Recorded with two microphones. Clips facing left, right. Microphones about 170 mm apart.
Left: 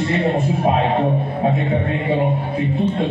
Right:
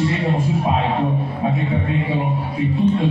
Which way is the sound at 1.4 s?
45° left (ahead or behind).